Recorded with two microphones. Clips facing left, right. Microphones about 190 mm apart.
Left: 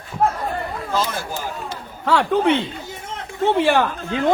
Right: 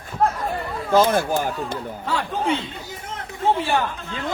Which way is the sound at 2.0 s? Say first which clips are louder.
Left 8 dB; 70° left (ahead or behind).